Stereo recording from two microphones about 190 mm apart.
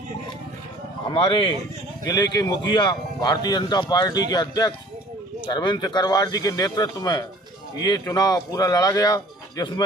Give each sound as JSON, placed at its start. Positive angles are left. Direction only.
{"t": 1.1, "sound": "speech", "side_deg": 30}